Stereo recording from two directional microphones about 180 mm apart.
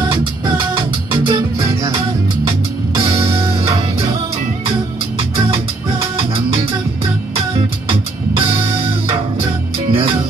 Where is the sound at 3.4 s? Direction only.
35° right (ahead or behind).